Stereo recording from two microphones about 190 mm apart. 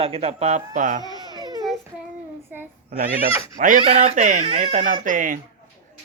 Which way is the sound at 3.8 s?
30° right (ahead or behind).